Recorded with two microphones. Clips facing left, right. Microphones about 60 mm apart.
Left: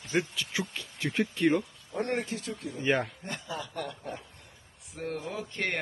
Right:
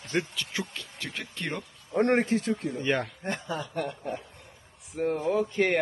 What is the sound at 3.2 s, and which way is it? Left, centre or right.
Speech, right.